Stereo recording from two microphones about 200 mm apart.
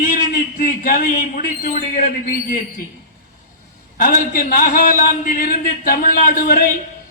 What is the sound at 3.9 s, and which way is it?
A man's voice, 45° left (ahead or behind).